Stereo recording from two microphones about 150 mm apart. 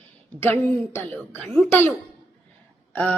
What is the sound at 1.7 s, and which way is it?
Speech, 15° left (ahead or behind).